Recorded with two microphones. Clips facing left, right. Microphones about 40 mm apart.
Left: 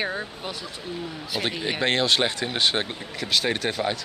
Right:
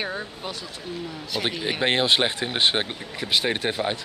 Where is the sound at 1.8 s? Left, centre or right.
Centre.